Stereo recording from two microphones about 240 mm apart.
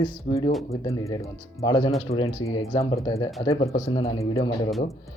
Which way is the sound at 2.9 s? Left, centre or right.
Centre.